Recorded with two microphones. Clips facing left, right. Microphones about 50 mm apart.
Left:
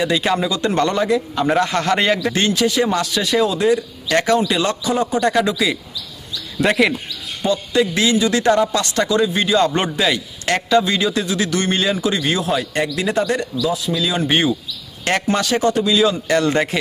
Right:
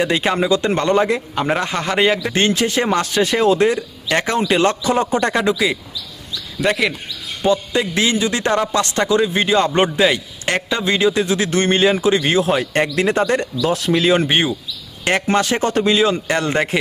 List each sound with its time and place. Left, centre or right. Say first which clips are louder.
0.0 s a man's voice: right 1 dB; right
1.7 s a man's voice: even; centre
2.3 s a man's voice: even; right
6.6 s speech: left 2 dB; centre
7.4 s speech: even; right
13.6 s speech: right 3 dB; right
14.0 s speech: right 7 dB; right
14.3 s a man's voice: left 1 dB; right